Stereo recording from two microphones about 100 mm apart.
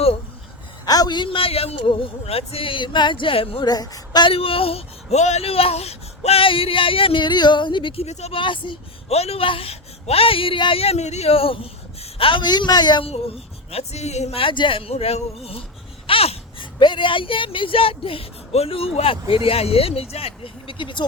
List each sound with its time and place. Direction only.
0.9 s a man's voice: 40° left (ahead or behind); by 3.6 s 70° left (ahead or behind)
3.6 s a sound: 40° left (ahead or behind)
4.3 s speech: 70° left (ahead or behind)
8.0 s a man's voice: 75° left (ahead or behind); by 8.8 s 55° left (ahead or behind)
9.0 s speech: 90° left; by 13.1 s 45° left (ahead or behind)
13.1 s speech: 85° left
16.0 s a sound: 80° left
16.8 s a man's voice: 55° left (ahead or behind)